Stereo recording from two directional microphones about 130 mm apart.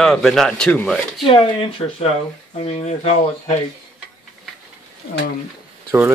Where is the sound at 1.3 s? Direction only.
45° left (ahead or behind).